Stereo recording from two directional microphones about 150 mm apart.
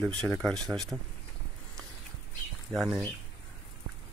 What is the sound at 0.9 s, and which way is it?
Speech, 10° right (ahead or behind).